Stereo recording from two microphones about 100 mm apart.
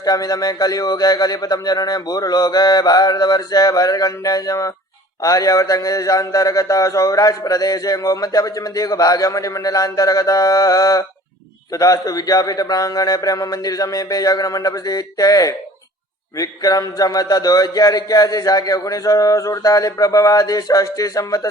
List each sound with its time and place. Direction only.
0.0 s a man's voice: 40° left (ahead or behind)